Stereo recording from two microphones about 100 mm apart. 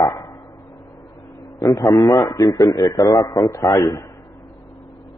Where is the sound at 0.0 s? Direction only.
35° left (ahead or behind).